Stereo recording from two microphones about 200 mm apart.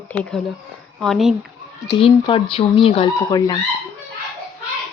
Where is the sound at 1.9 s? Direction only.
25° left (ahead or behind).